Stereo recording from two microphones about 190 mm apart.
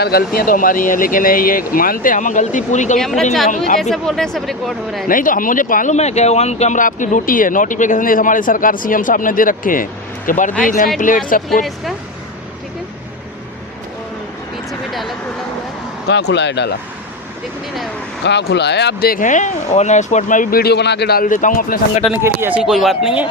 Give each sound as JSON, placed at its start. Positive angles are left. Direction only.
{"t": 0.0, "sound": "speech", "side_deg": 55}
{"t": 3.0, "sound": "speech", "side_deg": 0}
{"t": 5.0, "sound": "speech", "side_deg": 45}
{"t": 16.0, "sound": "speech", "side_deg": 65}
{"t": 18.3, "sound": "speech", "side_deg": 65}
{"t": 22.2, "sound": "speech", "side_deg": -10}